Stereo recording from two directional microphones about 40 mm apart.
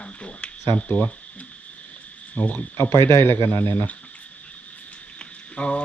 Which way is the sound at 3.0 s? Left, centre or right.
Left.